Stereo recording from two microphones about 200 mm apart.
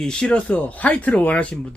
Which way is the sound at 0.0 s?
5° left (ahead or behind).